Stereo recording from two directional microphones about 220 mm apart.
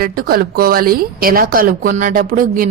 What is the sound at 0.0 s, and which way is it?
A woman's voice, 45° right (ahead or behind).